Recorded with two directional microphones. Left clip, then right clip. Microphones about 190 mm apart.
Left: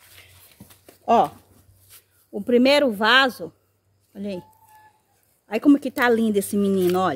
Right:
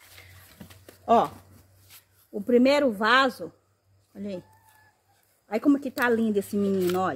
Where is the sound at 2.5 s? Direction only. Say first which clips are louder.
Left 4 dB; 50° left (ahead or behind).